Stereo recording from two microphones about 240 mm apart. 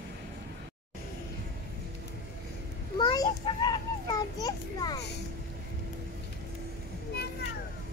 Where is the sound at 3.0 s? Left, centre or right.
Centre.